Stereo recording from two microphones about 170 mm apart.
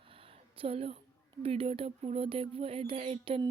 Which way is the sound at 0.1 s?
35° right (ahead or behind).